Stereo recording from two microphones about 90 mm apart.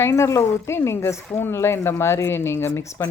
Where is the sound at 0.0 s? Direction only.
30° left (ahead or behind).